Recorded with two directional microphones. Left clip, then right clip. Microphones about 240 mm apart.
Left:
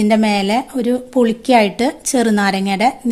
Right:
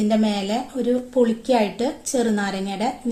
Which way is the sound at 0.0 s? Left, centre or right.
Left.